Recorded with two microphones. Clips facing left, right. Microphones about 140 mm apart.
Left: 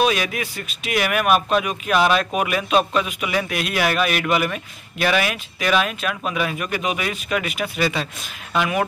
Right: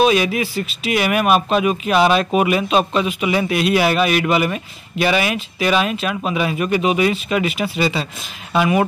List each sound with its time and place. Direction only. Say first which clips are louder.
0.0 s speech: right 5 dB; centre (ahead or behind)